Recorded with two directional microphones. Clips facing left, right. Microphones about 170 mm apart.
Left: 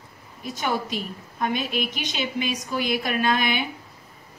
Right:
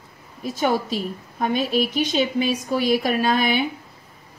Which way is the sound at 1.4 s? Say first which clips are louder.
Right 5 dB; 35° right (ahead or behind).